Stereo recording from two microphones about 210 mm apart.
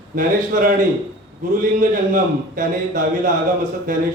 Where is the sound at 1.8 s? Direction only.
40° right (ahead or behind).